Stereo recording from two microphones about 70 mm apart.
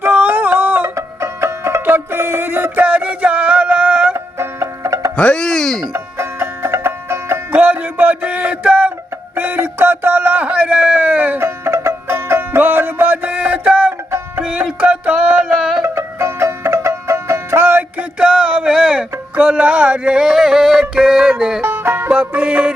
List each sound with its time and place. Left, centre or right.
0.0 s a sound: right
0.9 s music: right
1.8 s music: right
4.4 s music: right
5.1 s speech: centre
5.9 s music: right
7.5 s music: right
9.3 s a sound: right
11.3 s music: right; by 15.7 s centre
15.8 s music: right
18.2 s music: centre
21.6 s music: right
22.1 s music: right